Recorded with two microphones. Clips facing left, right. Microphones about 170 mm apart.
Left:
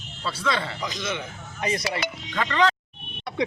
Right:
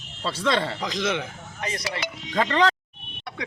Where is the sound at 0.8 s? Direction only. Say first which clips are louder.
Right 4 dB; 90° right.